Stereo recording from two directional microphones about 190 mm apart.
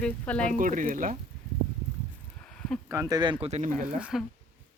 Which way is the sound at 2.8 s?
15° right (ahead or behind).